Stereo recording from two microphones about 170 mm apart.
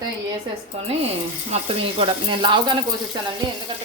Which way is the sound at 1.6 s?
35° right (ahead or behind).